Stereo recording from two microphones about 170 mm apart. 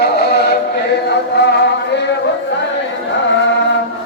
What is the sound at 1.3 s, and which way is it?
Music, 80° left.